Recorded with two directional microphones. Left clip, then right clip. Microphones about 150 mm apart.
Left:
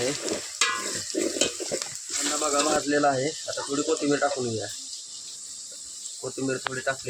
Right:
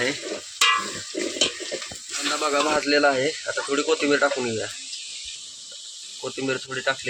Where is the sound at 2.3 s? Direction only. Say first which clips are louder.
Right 3 dB; 20° right (ahead or behind).